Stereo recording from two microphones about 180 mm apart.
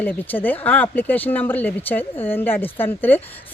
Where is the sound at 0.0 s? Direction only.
10° left (ahead or behind).